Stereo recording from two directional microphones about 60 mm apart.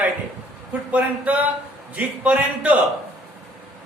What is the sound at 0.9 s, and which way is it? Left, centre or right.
A man's voice, right.